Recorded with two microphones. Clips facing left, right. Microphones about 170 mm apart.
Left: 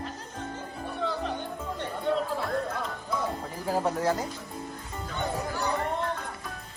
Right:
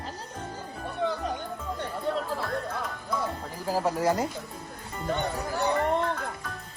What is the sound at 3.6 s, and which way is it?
Speech, centre (ahead or behind).